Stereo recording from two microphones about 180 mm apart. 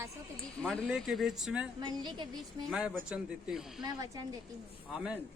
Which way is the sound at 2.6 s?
Centre (ahead or behind).